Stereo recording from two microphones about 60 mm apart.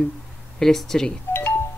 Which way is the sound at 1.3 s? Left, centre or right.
Left.